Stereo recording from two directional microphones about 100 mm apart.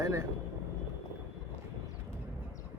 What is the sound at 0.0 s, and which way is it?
Speech, 30° right (ahead or behind).